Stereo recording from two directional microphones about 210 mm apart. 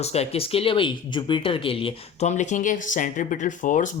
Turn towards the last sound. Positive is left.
turn(degrees=35)  # may be behind; listen again after turning